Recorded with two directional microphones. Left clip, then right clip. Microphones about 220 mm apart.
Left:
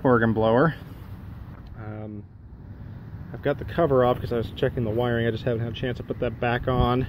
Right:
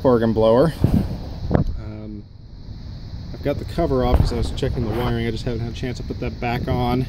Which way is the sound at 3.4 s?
10° right (ahead or behind).